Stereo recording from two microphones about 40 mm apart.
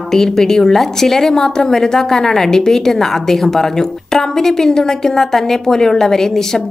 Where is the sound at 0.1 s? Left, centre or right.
Centre.